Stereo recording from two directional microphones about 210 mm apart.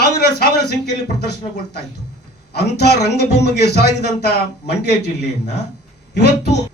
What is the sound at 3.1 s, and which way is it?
A man's voice, 50° left (ahead or behind).